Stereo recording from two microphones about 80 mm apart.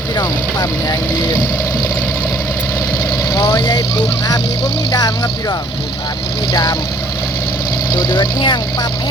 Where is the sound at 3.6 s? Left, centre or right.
Left.